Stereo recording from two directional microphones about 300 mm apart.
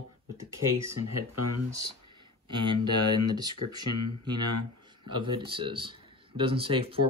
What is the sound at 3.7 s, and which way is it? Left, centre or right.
Speech, right.